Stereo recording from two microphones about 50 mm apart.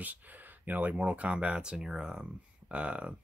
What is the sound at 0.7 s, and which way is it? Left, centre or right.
Speech, right.